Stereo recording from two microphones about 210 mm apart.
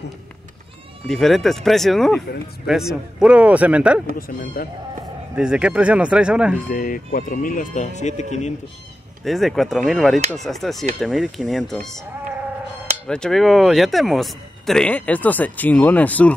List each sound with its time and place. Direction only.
1.0 s speech: centre (ahead or behind)
4.6 s speech: 45° left (ahead or behind)
5.3 s speech: 5° right (ahead or behind)
6.7 s speech: 40° left (ahead or behind)
9.2 s speech: centre (ahead or behind)
13.1 s speech: centre (ahead or behind)